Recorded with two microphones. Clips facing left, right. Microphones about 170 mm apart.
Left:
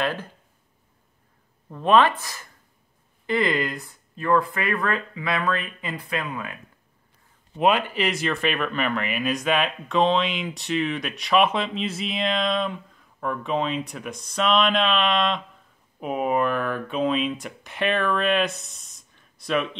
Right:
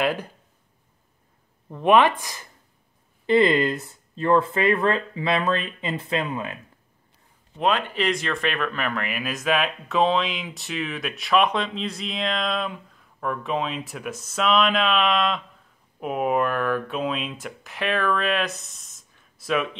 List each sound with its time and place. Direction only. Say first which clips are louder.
0.0 s speech: right 2 dB; 15° right (ahead or behind)
1.7 s speech: right 1 dB; 15° right (ahead or behind)
7.5 s speech: left 2 dB; 10° left (ahead or behind)